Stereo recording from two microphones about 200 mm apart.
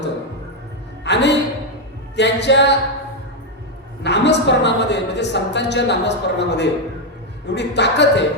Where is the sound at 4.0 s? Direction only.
60° left (ahead or behind).